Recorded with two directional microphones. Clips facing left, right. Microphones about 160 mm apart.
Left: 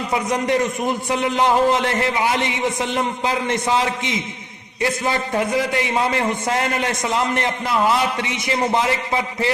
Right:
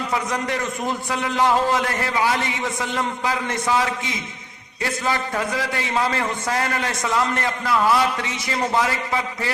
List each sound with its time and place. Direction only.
0.1 s a man's voice: 20° left (ahead or behind)